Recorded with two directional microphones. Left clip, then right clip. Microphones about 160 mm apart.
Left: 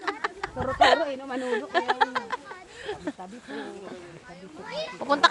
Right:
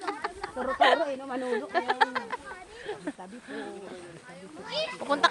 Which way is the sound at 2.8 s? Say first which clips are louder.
Left 3 dB; 30° left (ahead or behind).